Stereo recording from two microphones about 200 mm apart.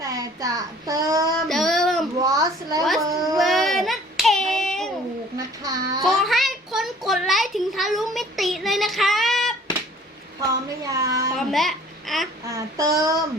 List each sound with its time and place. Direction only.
0.0 s child singing: 15° right (ahead or behind)
1.5 s child singing: centre (ahead or behind)
2.2 s a sound: 15° right (ahead or behind)
3.0 s cat: 15° right (ahead or behind)
3.3 s child singing: centre (ahead or behind)
5.4 s child singing: 20° right (ahead or behind)
6.0 s a sound: centre (ahead or behind)
10.4 s speech: 15° right (ahead or behind)
11.3 s a child's voice: centre (ahead or behind)
12.5 s speech: 15° right (ahead or behind)